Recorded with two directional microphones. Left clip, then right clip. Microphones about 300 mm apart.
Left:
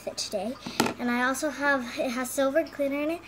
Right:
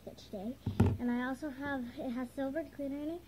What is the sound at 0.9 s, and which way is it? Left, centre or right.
Speech, left.